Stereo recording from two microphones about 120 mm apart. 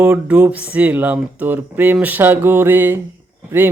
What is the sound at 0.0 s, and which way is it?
Speech, 15° right (ahead or behind).